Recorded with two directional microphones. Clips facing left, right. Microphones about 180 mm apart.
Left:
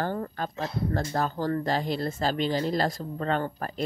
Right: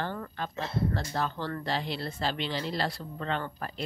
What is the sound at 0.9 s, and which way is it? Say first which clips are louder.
Speech: left 4 dB; 45° left (ahead or behind).